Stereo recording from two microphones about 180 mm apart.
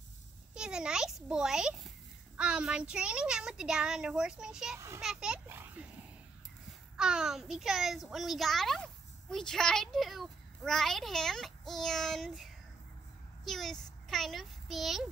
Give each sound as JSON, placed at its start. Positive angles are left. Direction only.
{"t": 0.6, "sound": "a child's voice", "side_deg": -5}
{"t": 4.7, "sound": "a child's voice", "side_deg": -15}
{"t": 5.0, "sound": "a child's voice", "side_deg": -5}
{"t": 7.0, "sound": "a child's voice", "side_deg": -5}
{"t": 13.5, "sound": "a child's voice", "side_deg": 0}